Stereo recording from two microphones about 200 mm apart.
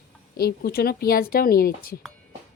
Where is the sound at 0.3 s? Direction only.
50° left (ahead or behind).